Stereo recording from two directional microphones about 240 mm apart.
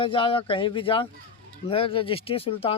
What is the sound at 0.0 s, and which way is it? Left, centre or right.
Speech, left.